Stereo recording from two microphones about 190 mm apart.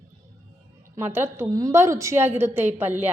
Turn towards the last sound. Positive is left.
turn(degrees=-10)  # may be behind; listen again after turning